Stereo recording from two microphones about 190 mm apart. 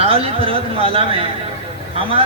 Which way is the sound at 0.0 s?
30° right (ahead or behind).